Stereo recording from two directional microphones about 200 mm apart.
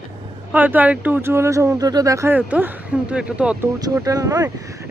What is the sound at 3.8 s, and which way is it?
Speech, 15° right (ahead or behind).